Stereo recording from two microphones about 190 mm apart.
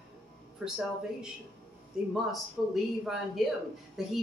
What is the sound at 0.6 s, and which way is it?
Speech, 5° right (ahead or behind).